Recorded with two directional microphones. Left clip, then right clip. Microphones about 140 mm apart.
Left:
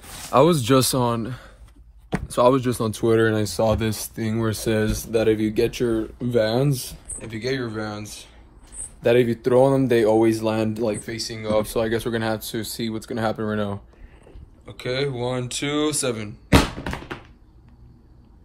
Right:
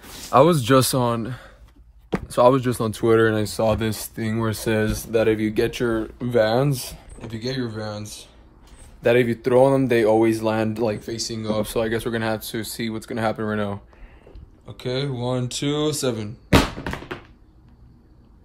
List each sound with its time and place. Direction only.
0.3 s speech: 15° right (ahead or behind)
6.7 s speech: 50° right (ahead or behind)
7.2 s speech: 30° right (ahead or behind)
9.0 s speech: 5° right (ahead or behind)
10.8 s speech: 90° right
11.7 s speech: 10° left (ahead or behind); by 13.7 s 5° right (ahead or behind)
14.8 s speech: 20° right (ahead or behind)
16.4 s tap: centre (ahead or behind)